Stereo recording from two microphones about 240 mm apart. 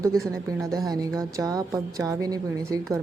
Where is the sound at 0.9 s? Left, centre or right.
Centre.